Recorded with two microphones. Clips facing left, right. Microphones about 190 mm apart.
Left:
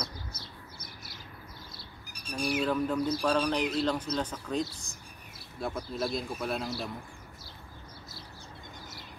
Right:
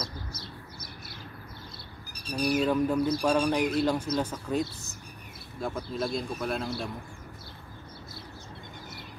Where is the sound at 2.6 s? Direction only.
10° right (ahead or behind).